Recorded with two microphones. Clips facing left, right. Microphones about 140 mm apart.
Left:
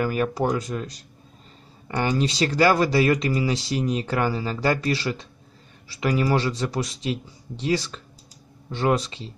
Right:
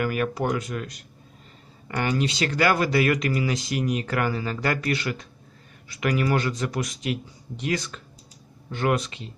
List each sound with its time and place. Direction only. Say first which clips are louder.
0.0 s speech: left 2 dB; 30° left (ahead or behind)